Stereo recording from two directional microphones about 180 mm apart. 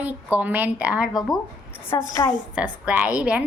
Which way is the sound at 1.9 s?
20° left (ahead or behind).